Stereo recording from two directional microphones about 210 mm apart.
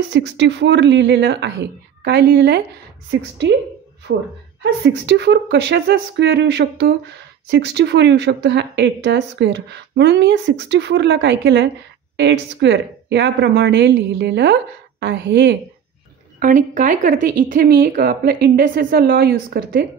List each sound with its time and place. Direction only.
0.1 s a woman's voice: 55° right (ahead or behind)
16.3 s a woman's voice: 40° right (ahead or behind)